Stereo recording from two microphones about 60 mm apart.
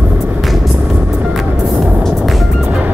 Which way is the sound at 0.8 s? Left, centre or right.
Right.